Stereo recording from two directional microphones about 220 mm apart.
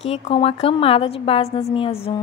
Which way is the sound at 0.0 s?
25° left (ahead or behind).